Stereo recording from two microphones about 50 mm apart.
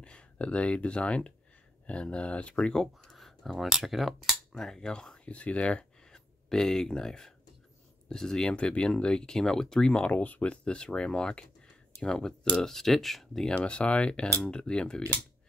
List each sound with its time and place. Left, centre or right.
0.0 s speech: left
10.0 s speech: left